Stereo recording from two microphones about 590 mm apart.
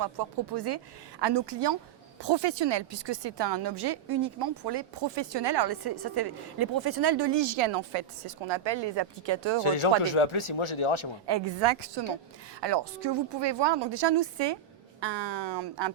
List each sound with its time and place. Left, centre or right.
0.0 s a woman's voice: right
9.6 s speech: left
11.3 s a woman's voice: right